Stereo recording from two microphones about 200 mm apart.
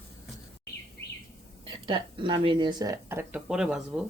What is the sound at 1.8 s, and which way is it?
A woman's voice, 25° right (ahead or behind).